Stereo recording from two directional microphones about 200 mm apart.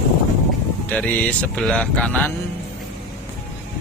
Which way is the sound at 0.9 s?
5° left (ahead or behind).